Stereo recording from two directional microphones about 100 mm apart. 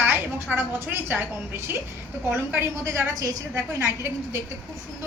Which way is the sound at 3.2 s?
35° right (ahead or behind).